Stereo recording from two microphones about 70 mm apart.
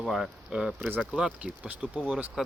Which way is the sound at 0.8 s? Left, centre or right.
Right.